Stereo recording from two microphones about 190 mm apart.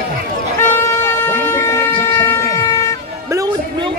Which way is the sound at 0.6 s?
10° left (ahead or behind).